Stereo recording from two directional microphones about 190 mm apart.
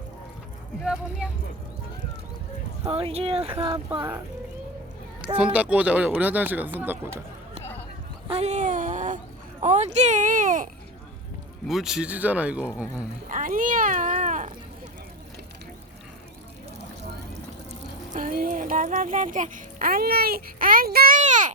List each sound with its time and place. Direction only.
2.8 s speech: 30° right (ahead or behind)
5.4 s speech: 5° right (ahead or behind)
8.3 s a sound: 35° right (ahead or behind)
9.6 s speech: 40° right (ahead or behind)
11.7 s speech: centre (ahead or behind)
13.2 s cat: 45° right (ahead or behind)
18.1 s a child's voice: 45° right (ahead or behind)